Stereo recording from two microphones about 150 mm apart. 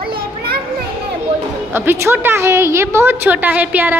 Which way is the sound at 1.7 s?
15° right (ahead or behind).